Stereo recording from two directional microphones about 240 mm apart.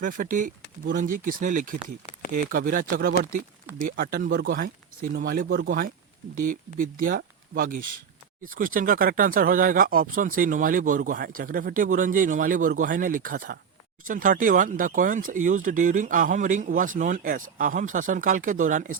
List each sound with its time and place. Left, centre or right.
0.0 s speech: right
7.0 s speech: right